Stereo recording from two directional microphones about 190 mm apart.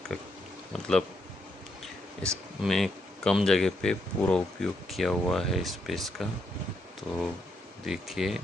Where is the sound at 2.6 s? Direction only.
Centre (ahead or behind).